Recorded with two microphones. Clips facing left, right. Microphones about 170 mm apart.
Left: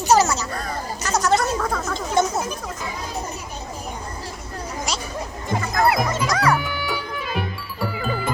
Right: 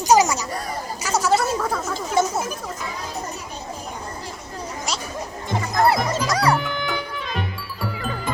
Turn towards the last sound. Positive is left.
turn(degrees=5)  # may be behind; listen again after turning